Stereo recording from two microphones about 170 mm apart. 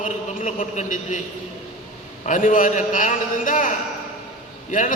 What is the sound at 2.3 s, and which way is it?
A man's voice, 50° left (ahead or behind).